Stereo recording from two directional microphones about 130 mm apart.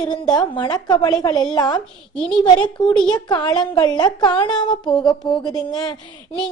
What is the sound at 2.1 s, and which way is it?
Speech, 5° left (ahead or behind).